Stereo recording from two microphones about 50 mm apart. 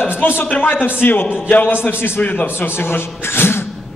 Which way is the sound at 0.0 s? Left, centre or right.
Left.